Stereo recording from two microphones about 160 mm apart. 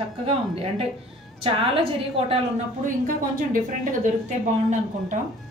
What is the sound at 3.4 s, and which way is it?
Speech, 55° right (ahead or behind).